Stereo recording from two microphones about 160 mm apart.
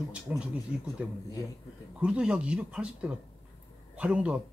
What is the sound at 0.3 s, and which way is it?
Speech, 5° right (ahead or behind).